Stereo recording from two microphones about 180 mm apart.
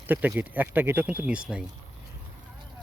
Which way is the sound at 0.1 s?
10° right (ahead or behind).